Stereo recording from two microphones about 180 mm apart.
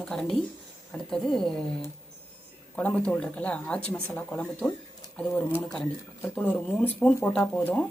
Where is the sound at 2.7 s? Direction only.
10° left (ahead or behind).